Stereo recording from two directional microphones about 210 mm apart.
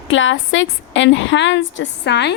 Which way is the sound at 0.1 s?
65° left (ahead or behind).